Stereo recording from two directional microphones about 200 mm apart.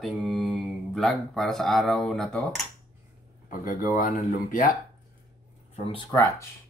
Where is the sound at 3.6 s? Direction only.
40° left (ahead or behind).